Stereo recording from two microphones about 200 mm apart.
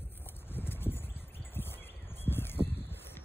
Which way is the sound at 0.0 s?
10° left (ahead or behind).